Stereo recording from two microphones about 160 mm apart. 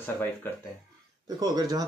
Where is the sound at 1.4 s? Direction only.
25° right (ahead or behind).